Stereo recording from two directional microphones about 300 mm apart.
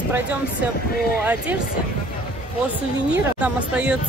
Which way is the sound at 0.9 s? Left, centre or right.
Left.